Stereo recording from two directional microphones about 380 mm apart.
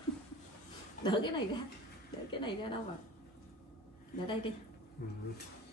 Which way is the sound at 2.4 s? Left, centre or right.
Centre.